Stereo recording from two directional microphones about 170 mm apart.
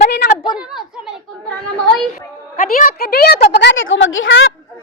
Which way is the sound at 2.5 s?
55° left (ahead or behind).